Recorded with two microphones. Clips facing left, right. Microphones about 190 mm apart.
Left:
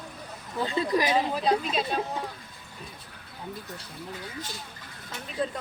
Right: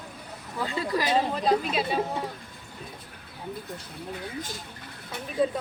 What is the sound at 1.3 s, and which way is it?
Speech, centre (ahead or behind).